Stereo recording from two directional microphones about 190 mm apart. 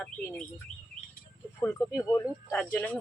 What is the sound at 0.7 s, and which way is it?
Chirp, 40° left (ahead or behind).